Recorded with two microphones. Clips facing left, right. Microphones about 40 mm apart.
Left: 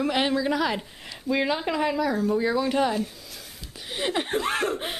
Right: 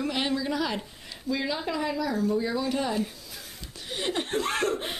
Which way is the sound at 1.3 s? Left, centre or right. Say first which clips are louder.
Left 4 dB; left.